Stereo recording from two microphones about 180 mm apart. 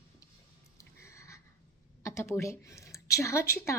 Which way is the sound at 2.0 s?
15° left (ahead or behind).